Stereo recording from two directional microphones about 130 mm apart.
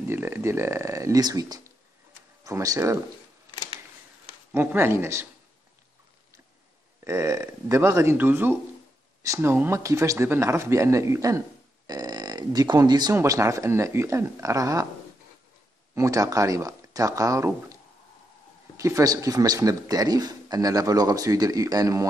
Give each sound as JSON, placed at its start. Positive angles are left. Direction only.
{"t": 0.1, "sound": "speech", "side_deg": -15}
{"t": 4.5, "sound": "speech", "side_deg": -15}
{"t": 7.1, "sound": "speech", "side_deg": -25}
{"t": 15.9, "sound": "speech", "side_deg": -25}
{"t": 18.8, "sound": "speech", "side_deg": -25}